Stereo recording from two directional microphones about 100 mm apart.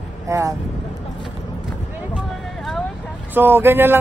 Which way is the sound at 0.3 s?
30° right (ahead or behind).